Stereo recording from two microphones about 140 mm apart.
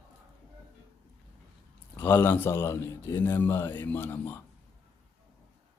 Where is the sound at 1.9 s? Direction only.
15° left (ahead or behind).